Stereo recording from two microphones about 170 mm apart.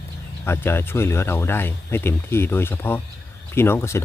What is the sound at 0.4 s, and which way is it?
Speech, 15° left (ahead or behind).